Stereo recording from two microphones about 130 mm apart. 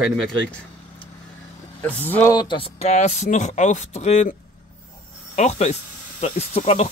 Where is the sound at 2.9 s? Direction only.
60° left (ahead or behind).